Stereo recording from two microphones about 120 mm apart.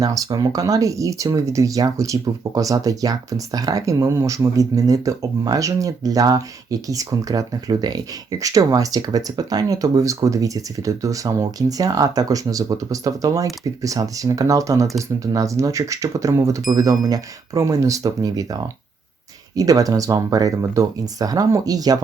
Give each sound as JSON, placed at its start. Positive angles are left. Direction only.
{"t": 0.0, "sound": "speech", "side_deg": -30}